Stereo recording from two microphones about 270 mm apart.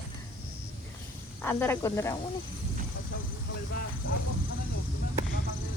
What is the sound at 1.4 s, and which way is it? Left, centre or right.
Speech, centre.